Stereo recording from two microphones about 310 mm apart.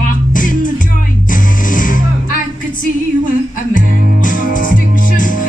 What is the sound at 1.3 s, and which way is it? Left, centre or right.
Music, left.